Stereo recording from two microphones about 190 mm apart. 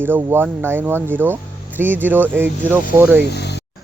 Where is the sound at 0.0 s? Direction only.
10° right (ahead or behind).